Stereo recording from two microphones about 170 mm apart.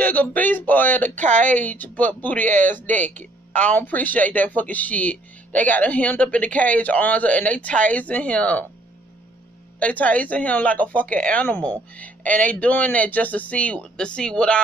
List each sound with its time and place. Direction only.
0.0 s speech: 10° left (ahead or behind)
1.1 s speech: 45° right (ahead or behind)
1.5 s speech: 10° left (ahead or behind)
2.4 s speech: 50° right (ahead or behind)
3.5 s speech: 10° left (ahead or behind)
9.8 s speech: 10° left (ahead or behind)